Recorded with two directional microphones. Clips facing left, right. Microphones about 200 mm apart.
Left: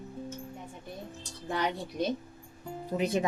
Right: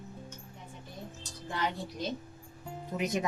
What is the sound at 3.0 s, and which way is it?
Speech, 30° left (ahead or behind).